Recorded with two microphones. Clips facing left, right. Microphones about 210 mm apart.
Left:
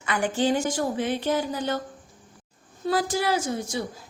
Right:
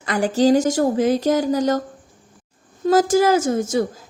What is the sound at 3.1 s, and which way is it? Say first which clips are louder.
Speech: right 9 dB; 45° right (ahead or behind).